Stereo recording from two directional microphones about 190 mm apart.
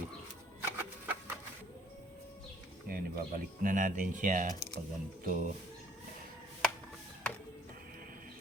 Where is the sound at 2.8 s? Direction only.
50° right (ahead or behind).